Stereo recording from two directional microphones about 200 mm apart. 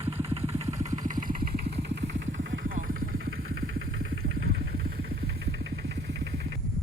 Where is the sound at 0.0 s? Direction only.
30° right (ahead or behind).